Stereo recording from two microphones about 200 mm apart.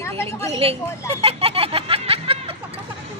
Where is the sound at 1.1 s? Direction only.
30° right (ahead or behind).